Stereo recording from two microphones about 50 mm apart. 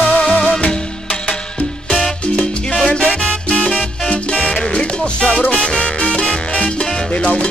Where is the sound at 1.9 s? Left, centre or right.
Centre.